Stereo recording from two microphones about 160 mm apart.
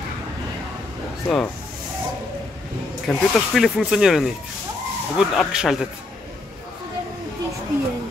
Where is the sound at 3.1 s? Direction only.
Centre (ahead or behind).